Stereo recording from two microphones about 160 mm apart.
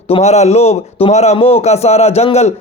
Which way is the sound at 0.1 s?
45° left (ahead or behind).